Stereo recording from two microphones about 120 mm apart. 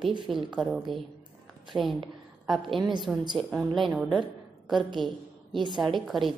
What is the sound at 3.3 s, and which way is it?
A woman's voice, centre (ahead or behind).